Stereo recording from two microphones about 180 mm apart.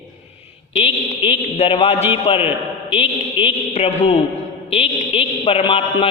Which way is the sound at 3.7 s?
40° left (ahead or behind).